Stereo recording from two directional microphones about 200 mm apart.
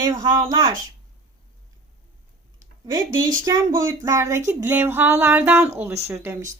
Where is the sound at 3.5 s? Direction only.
15° right (ahead or behind).